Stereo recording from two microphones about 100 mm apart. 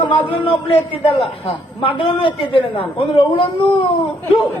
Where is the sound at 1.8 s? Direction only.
60° left (ahead or behind).